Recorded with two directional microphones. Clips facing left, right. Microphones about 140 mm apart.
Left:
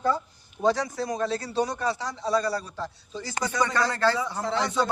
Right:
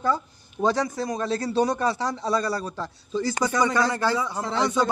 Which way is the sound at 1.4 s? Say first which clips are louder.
Right 5 dB; 50° right (ahead or behind).